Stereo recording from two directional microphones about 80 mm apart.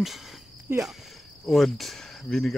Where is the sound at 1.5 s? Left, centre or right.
Centre.